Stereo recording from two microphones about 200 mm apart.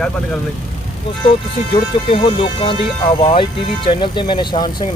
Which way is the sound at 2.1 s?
25° left (ahead or behind).